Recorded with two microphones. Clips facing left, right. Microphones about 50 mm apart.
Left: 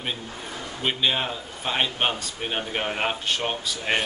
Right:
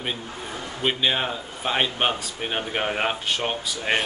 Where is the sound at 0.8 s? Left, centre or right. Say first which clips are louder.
Right 1 dB; centre.